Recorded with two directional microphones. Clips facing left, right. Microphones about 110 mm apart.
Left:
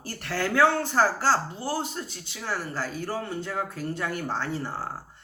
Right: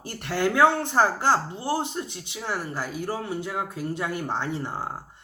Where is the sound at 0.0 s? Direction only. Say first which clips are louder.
Right 4 dB; 20° right (ahead or behind).